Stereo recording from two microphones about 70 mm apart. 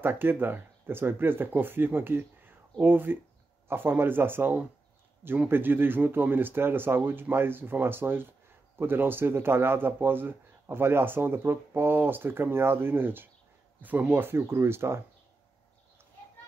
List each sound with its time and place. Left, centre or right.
0.0 s speech: right